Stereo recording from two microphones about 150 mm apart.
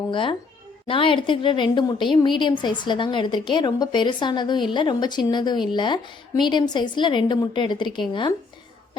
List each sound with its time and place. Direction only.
0.1 s a woman's voice: 35° left (ahead or behind)